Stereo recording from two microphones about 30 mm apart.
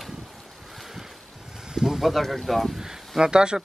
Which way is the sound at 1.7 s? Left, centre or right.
Right.